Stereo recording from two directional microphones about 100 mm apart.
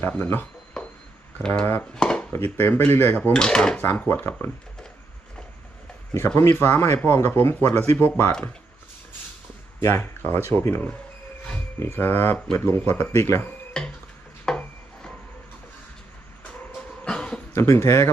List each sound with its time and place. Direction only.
0.2 s speech: 25° left (ahead or behind)
0.8 s a sound: 5° left (ahead or behind)
1.4 s speech: 10° left (ahead or behind)
2.0 s dishes: 10° left (ahead or behind)
2.6 s speech: 20° left (ahead or behind)
3.3 s speech: 5° left (ahead or behind)
6.1 s speech: 25° left (ahead or behind)
9.8 s speech: 25° left (ahead or behind)
13.7 s a sound: 5° left (ahead or behind)
17.1 s a sound: 10° left (ahead or behind)
17.5 s speech: 25° left (ahead or behind)